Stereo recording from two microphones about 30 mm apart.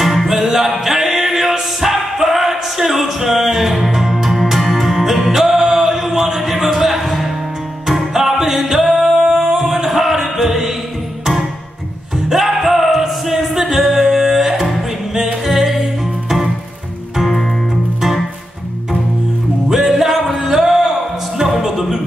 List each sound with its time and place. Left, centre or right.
0.0 s music: centre
5.3 s music: centre
9.2 s music: right
9.6 s music: centre
12.3 s music: centre
17.2 s music: centre
19.7 s music: centre